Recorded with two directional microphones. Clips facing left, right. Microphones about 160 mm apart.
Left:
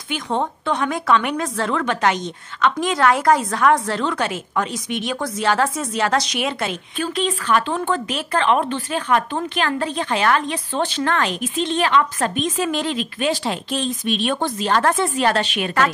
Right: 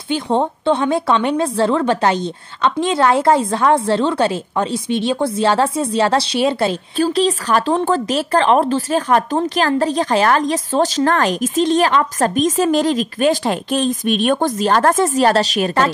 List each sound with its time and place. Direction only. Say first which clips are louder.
0.1 s speech: right 6 dB; 30° right (ahead or behind)